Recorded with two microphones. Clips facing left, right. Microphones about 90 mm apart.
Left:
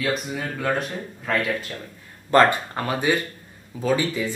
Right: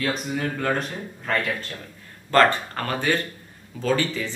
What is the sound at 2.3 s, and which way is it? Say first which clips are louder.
Speech: left 1 dB; 15° left (ahead or behind).